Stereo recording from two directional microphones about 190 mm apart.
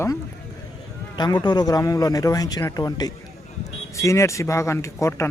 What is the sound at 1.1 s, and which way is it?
A man's voice, 20° left (ahead or behind).